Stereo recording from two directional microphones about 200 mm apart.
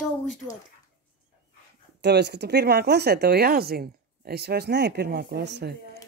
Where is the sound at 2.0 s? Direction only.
55° right (ahead or behind).